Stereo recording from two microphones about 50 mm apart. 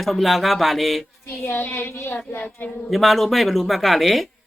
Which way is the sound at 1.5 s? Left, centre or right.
Left.